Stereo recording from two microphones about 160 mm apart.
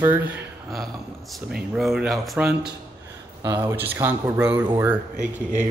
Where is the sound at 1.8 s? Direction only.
Centre (ahead or behind).